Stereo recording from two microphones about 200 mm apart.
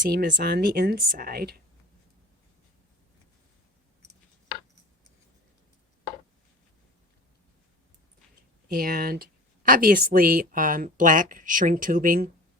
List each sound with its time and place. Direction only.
0.1 s a woman's voice: 45° right (ahead or behind)
8.7 s a woman's voice: 45° right (ahead or behind)